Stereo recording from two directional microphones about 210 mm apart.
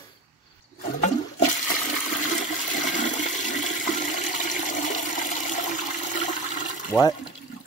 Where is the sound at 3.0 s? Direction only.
35° left (ahead or behind).